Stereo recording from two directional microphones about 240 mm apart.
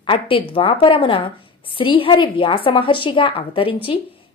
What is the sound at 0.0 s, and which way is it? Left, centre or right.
Speech, left.